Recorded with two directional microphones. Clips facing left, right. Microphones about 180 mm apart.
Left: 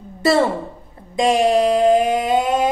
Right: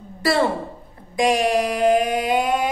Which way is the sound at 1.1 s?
25° left (ahead or behind).